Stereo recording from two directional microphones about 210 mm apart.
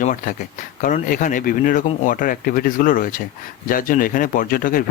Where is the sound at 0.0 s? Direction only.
35° left (ahead or behind).